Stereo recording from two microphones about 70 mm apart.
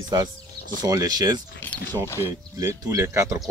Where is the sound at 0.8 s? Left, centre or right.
Right.